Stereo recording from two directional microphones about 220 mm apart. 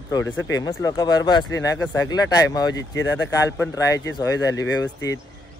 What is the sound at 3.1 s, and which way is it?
Speech, 15° left (ahead or behind).